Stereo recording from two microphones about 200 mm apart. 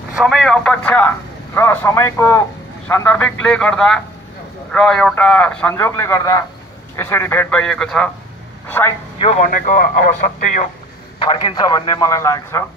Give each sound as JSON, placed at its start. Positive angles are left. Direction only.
{"t": 0.1, "sound": "a man's voice", "side_deg": 0}
{"t": 9.2, "sound": "speech", "side_deg": 35}
{"t": 11.2, "sound": "a man's voice", "side_deg": 20}